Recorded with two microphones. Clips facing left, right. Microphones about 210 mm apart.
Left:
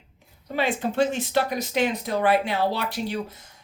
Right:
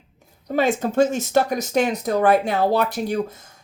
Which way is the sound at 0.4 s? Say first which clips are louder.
Right 5 dB; 45° right (ahead or behind).